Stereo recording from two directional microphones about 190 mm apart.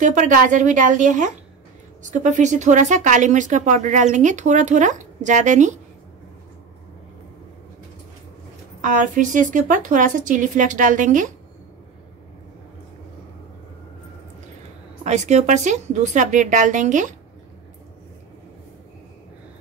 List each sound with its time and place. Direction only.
0.0 s speech: 40° right (ahead or behind)
8.8 s a woman's voice: 40° right (ahead or behind)
15.0 s speech: 35° right (ahead or behind)